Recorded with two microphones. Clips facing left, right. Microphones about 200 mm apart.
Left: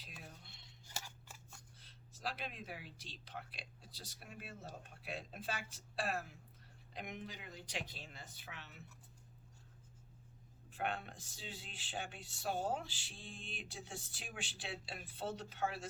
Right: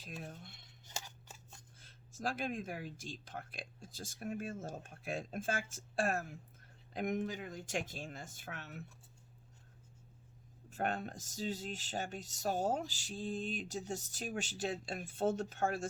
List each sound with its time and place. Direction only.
0.0 s a sound: 45° right (ahead or behind)
0.9 s scissors: 20° right (ahead or behind)
1.8 s speech: 45° right (ahead or behind)
10.7 s speech: 45° right (ahead or behind)